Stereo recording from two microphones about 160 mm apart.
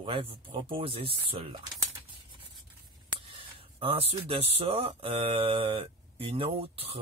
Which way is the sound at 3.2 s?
35° right (ahead or behind).